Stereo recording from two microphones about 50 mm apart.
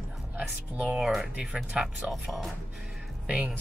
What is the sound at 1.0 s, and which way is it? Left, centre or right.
Speech, centre.